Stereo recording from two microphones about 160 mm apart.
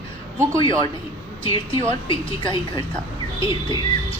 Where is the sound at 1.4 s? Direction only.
30° left (ahead or behind).